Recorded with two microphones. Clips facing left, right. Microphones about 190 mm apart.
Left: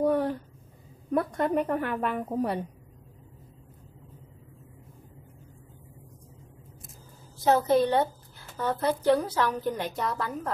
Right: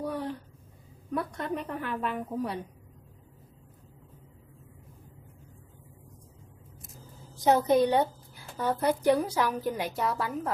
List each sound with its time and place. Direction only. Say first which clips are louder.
0.0 s a sound: left 8 dB; 50° left (ahead or behind)
1.1 s a woman's voice: left 7 dB; 55° left (ahead or behind)
7.3 s a woman's voice: even; 15° right (ahead or behind)